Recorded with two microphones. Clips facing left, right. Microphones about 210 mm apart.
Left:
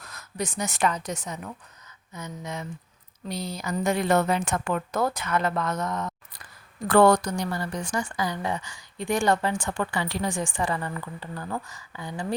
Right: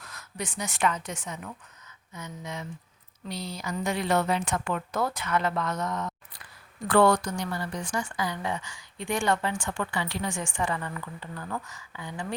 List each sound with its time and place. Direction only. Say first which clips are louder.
0.0 s a woman's voice: left 5 dB; 40° left (ahead or behind)